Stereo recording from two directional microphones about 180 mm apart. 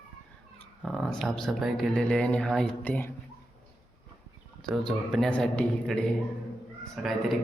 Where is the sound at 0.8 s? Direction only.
Centre (ahead or behind).